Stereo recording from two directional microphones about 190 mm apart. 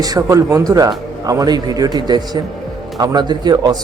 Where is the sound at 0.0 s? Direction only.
20° right (ahead or behind).